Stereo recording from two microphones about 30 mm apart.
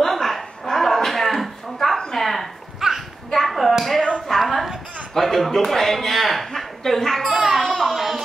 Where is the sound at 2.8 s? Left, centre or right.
Centre.